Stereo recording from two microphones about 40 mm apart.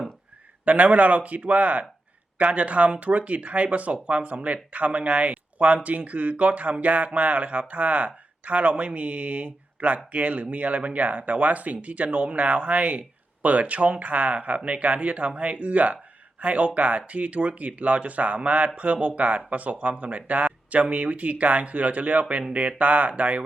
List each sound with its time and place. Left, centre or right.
0.6 s speech: right